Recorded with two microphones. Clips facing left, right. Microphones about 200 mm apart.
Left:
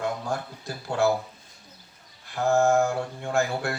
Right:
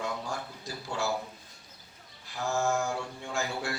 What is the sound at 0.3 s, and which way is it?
Speech, 55° left (ahead or behind).